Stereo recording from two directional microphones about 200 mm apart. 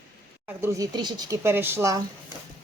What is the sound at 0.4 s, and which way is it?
Speech, 15° right (ahead or behind).